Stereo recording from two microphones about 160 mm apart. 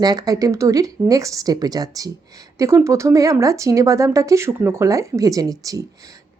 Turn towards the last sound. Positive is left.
turn(degrees=-20)  # may be behind; listen again after turning